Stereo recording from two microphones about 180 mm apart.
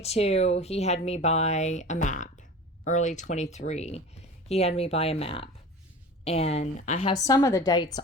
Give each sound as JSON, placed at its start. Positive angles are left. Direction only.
{"t": 0.0, "sound": "speech", "side_deg": 35}
{"t": 7.2, "sound": "a woman's voice", "side_deg": 20}